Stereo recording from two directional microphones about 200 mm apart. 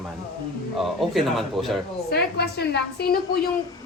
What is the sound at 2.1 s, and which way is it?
Speech, 55° left (ahead or behind).